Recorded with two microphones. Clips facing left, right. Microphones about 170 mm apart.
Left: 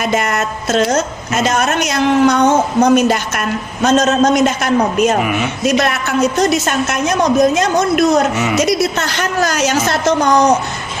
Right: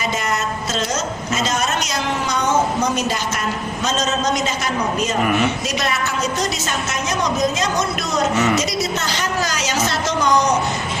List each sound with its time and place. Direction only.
0.0 s a woman's voice: 60° left (ahead or behind)
5.2 s speech: 5° left (ahead or behind)
5.6 s a woman's voice: 55° left (ahead or behind)